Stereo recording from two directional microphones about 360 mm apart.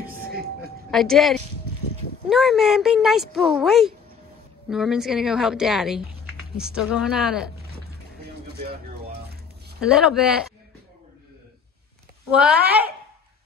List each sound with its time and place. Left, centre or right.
0.6 s speech: centre
8.5 s a sound: right
9.8 s speech: centre
12.3 s speech: centre